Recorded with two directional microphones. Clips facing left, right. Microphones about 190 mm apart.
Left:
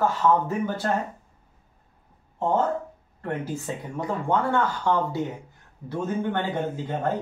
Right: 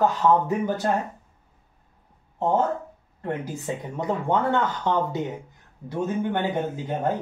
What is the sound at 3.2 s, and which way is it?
Speech, 20° right (ahead or behind).